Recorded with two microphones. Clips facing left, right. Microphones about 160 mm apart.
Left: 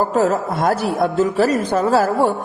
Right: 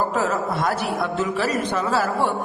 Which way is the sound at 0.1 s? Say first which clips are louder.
Left 5 dB; 40° left (ahead or behind).